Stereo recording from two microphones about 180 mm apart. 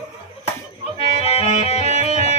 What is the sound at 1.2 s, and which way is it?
Music, 35° left (ahead or behind).